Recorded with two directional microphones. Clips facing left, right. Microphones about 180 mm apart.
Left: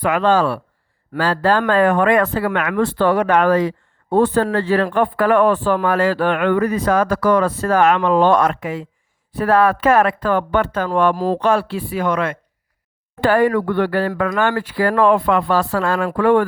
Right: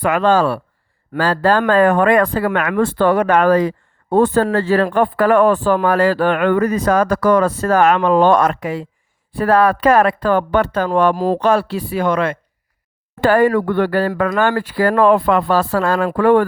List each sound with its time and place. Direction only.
0.0 s speech: 45° right (ahead or behind)
13.2 s speech: 45° right (ahead or behind)